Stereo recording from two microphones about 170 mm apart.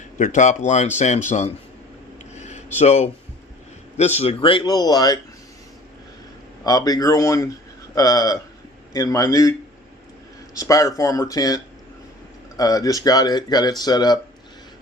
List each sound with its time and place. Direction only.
0.2 s speech: 45° left (ahead or behind)
2.3 s a sound: 40° left (ahead or behind)
3.9 s speech: 40° left (ahead or behind); by 5.2 s 25° left (ahead or behind)
6.7 s speech: 20° left (ahead or behind)
10.6 s speech: 20° left (ahead or behind)